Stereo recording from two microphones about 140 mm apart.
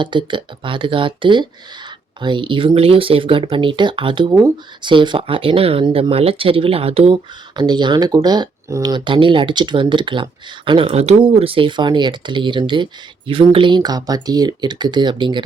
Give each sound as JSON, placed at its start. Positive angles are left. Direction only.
{"t": 0.0, "sound": "speech", "side_deg": -35}
{"t": 7.5, "sound": "speech", "side_deg": -30}